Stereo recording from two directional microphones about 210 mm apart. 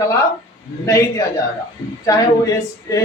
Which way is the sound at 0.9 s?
15° left (ahead or behind).